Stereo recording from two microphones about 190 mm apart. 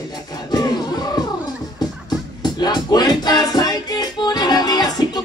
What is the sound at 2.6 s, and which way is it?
Music, 20° left (ahead or behind).